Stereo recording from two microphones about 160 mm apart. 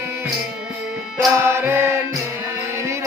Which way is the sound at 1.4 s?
15° right (ahead or behind).